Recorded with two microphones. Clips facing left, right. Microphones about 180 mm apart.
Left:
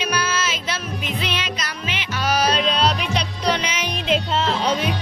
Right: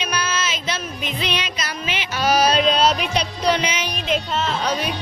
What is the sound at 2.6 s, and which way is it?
Music, 45° right (ahead or behind).